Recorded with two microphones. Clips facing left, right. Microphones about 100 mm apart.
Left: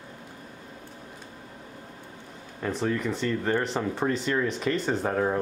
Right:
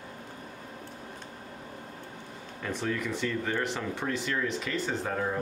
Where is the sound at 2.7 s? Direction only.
35° left (ahead or behind).